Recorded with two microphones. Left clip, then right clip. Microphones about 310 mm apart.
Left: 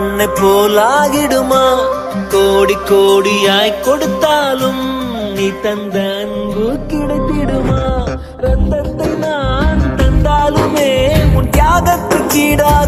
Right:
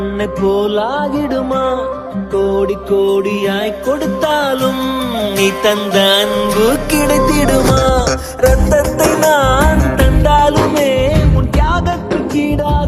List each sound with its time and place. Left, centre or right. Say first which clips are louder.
0.2 s music: left 5 dB; left
0.9 s music: left 5 dB; left
2.3 s music: left 4 dB; left
4.2 s music: left 2 dB; centre
5.4 s music: right 4 dB; centre; by 7.9 s right
8.7 s music: right 5 dB; right
10.2 s music: right 2 dB; centre
11.5 s music: left 6 dB; left